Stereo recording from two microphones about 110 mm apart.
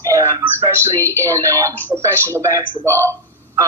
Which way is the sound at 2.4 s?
30° right (ahead or behind).